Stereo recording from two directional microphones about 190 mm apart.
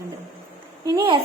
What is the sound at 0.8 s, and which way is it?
Speech, 25° right (ahead or behind).